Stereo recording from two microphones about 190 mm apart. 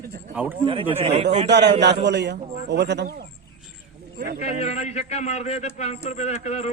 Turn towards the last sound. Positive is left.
turn(degrees=35)  # may be behind; listen again after turning